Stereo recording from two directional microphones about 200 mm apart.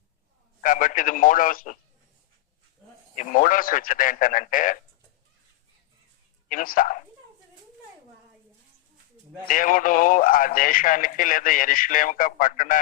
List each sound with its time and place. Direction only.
0.6 s speech: 40° left (ahead or behind)
3.2 s a man's voice: 40° left (ahead or behind)
6.5 s speech: 45° left (ahead or behind)
9.5 s a man's voice: 40° left (ahead or behind)